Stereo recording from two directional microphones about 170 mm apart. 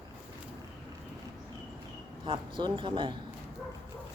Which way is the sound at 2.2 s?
30° right (ahead or behind).